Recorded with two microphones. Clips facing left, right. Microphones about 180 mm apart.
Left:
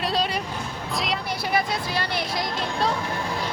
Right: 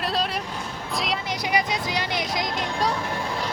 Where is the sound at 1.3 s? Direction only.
15° right (ahead or behind).